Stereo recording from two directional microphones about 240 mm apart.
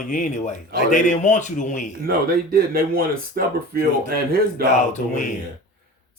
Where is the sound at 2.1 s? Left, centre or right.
Right.